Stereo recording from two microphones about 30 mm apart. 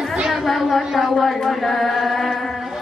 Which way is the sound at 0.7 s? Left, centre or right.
Centre.